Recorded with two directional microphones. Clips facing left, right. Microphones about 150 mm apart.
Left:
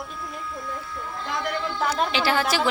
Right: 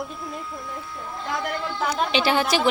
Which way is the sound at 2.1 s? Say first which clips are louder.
Right 2 dB; 20° right (ahead or behind).